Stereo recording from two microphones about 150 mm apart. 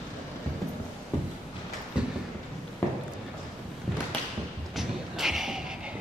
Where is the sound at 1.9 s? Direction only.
5° right (ahead or behind).